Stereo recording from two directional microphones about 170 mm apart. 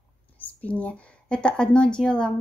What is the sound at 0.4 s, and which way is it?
A woman's voice, 10° left (ahead or behind).